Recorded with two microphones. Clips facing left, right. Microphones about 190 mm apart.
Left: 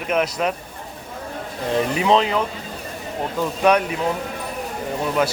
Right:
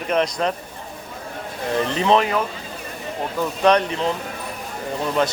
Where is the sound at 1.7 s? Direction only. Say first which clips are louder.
Even; 15° left (ahead or behind).